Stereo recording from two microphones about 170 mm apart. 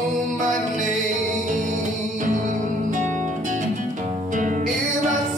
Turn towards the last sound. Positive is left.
turn(degrees=-50)  # may be behind; listen again after turning